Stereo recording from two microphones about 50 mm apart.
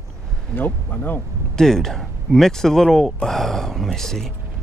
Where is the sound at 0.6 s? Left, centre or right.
Left.